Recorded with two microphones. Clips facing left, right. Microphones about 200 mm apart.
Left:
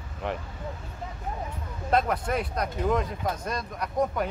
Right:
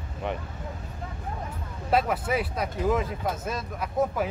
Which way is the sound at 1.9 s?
5° right (ahead or behind).